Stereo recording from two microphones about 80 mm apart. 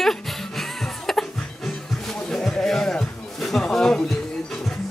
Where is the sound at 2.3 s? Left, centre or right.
Centre.